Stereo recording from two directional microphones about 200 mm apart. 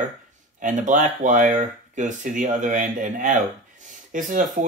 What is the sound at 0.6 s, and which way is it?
Speech, 40° right (ahead or behind).